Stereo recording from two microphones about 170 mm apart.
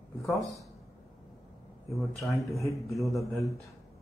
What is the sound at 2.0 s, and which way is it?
Speech, centre (ahead or behind).